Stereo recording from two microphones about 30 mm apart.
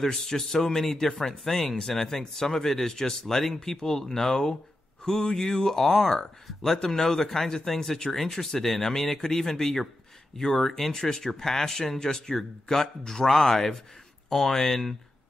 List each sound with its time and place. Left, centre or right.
0.0 s speech: centre
1.8 s speech: centre